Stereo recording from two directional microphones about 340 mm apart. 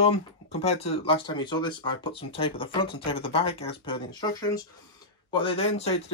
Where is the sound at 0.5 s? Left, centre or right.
Centre.